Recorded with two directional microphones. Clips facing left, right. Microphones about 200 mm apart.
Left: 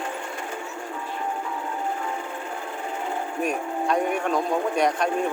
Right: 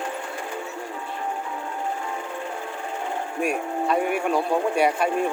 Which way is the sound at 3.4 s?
5° right (ahead or behind).